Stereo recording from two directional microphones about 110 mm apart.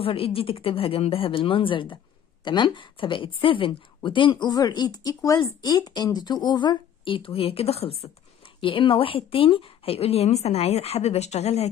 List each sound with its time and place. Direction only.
0.0 s a woman's voice: 60° left (ahead or behind)
8.5 s a woman's voice: 50° left (ahead or behind); by 11.7 s 75° left (ahead or behind)